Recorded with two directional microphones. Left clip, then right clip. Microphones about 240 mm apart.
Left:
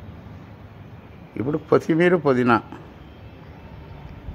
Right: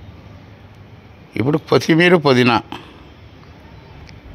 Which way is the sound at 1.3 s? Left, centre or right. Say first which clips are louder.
Right 4 dB; right.